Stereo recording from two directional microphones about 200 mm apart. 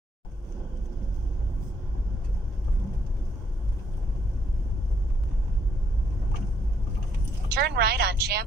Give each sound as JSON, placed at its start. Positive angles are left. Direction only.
{"t": 7.4, "sound": "speech", "side_deg": -55}